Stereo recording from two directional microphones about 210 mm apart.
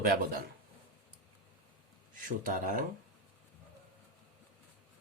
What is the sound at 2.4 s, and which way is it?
Speech, 40° right (ahead or behind).